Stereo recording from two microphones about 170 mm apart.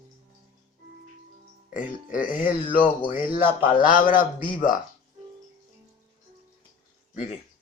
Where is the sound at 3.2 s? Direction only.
10° right (ahead or behind).